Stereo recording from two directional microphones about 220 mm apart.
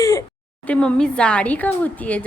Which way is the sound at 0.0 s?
15° left (ahead or behind).